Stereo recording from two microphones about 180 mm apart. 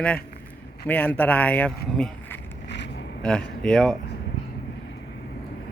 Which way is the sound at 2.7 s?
75° left (ahead or behind).